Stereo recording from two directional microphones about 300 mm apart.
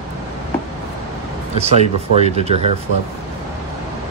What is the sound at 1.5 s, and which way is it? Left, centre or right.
Speech, right.